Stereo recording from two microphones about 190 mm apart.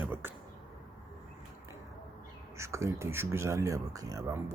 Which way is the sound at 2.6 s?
15° right (ahead or behind).